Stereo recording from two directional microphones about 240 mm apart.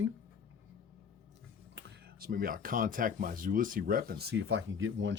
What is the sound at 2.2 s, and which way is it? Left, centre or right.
Speech, right.